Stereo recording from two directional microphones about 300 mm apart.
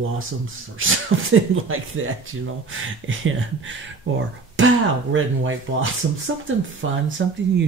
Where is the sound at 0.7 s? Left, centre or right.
Right.